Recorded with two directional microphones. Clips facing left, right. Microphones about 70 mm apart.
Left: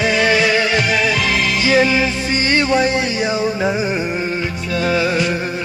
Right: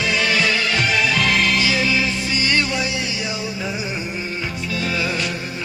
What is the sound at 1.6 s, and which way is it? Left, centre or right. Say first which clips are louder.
Music: left 6 dB; left.